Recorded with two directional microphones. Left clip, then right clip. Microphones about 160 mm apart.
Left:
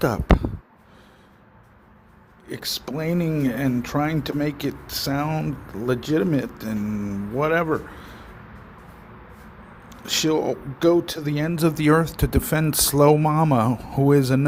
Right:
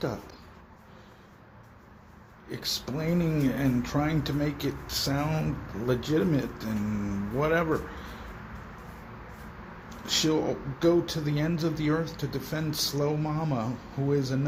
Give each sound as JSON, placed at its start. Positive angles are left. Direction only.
{"t": 2.8, "sound": "speech", "side_deg": 50}
{"t": 10.1, "sound": "speech", "side_deg": 55}